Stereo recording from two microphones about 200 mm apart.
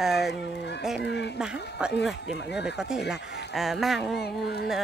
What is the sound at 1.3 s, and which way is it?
Speech, centre (ahead or behind).